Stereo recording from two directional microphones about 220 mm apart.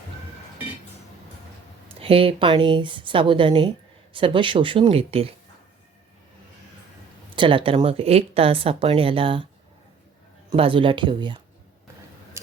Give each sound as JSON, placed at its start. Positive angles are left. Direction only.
{"t": 2.0, "sound": "a woman's voice", "side_deg": -25}
{"t": 7.3, "sound": "a woman's voice", "side_deg": -25}
{"t": 10.5, "sound": "a woman's voice", "side_deg": -25}